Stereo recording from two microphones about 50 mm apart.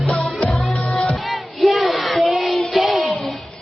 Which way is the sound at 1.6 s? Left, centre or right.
Centre.